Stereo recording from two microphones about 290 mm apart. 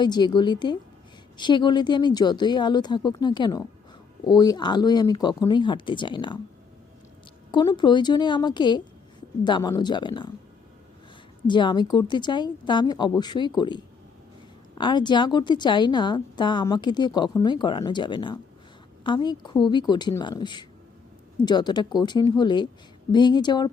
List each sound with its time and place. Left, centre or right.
0.0 s a woman's voice: centre
7.5 s a woman's voice: centre
11.4 s a woman's voice: centre